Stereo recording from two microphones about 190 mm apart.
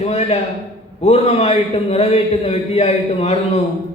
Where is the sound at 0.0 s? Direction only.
35° left (ahead or behind).